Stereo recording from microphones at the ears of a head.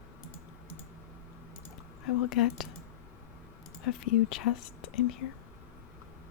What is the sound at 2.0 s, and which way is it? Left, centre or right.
Speech, left.